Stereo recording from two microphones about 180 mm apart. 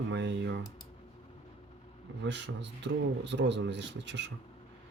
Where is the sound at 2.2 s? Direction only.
80° right.